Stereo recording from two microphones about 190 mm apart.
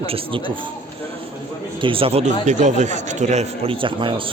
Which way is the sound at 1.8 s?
30° right (ahead or behind).